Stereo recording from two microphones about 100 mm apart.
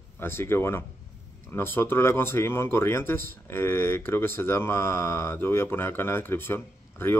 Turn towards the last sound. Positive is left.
turn(degrees=20)  # may be behind; listen again after turning